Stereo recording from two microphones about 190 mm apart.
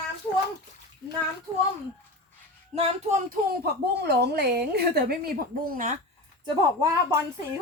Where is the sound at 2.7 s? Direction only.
30° right (ahead or behind).